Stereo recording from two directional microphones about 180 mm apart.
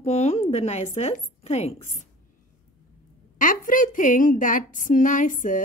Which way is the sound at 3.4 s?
45° left (ahead or behind).